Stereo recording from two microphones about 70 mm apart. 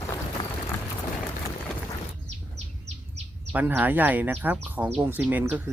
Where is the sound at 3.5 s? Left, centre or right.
Right.